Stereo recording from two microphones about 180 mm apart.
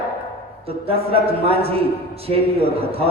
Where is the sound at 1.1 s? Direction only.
30° right (ahead or behind).